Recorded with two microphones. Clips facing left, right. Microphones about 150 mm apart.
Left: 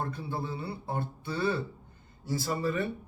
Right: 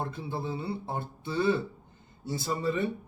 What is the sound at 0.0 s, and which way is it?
A man's voice, 25° right (ahead or behind).